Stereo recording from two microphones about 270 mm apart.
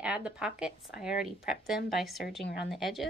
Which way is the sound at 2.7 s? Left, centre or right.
Centre.